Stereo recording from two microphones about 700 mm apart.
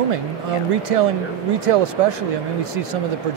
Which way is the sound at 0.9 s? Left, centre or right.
Right.